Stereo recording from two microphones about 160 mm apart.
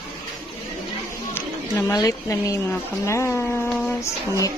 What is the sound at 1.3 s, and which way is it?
A woman's voice, 20° left (ahead or behind).